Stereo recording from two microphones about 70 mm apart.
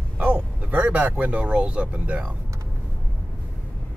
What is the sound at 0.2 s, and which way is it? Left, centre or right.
Speech, centre.